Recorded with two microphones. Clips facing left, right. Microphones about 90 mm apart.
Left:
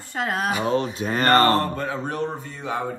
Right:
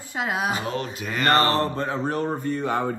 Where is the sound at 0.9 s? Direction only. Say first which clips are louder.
Left 1 dB; 35° left (ahead or behind).